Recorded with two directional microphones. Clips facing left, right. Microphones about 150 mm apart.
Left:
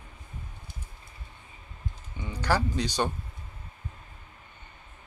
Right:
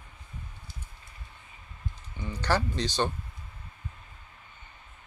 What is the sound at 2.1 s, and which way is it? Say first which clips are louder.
Speech: left 1 dB; 10° left (ahead or behind).